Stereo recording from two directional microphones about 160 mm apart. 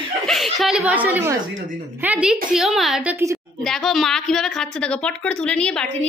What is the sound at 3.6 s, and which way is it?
A woman's voice, centre (ahead or behind).